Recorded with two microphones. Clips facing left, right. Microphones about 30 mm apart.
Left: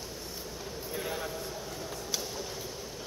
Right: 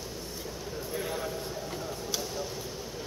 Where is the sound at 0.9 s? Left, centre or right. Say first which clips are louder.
Right 1 dB; centre.